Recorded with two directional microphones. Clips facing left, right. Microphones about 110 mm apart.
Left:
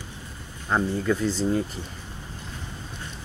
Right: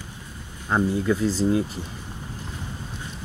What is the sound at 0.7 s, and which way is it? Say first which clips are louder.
Speech: right 2 dB; 5° right (ahead or behind).